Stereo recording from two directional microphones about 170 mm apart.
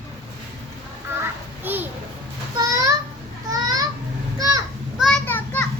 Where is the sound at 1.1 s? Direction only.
15° right (ahead or behind).